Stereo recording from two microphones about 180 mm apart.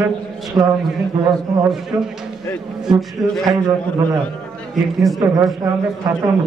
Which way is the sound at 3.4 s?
20° right (ahead or behind).